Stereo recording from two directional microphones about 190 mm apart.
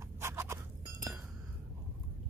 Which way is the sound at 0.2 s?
15° right (ahead or behind).